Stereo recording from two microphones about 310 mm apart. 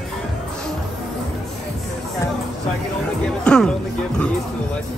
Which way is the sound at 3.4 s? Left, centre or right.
Centre.